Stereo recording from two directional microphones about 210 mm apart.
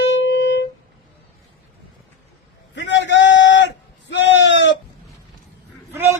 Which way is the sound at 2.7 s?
60° left (ahead or behind).